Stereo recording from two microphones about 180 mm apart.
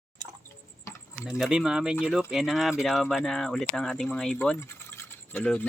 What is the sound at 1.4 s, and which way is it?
Speech, 5° right (ahead or behind).